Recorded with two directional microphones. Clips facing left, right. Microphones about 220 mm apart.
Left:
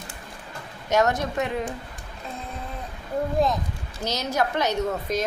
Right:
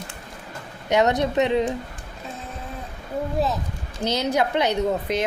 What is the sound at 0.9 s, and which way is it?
Speech, 15° right (ahead or behind).